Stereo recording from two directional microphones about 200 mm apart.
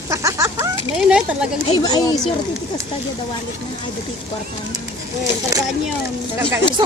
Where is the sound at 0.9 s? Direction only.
5° right (ahead or behind).